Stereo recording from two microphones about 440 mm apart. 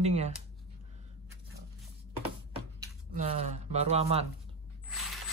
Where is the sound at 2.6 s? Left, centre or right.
Centre.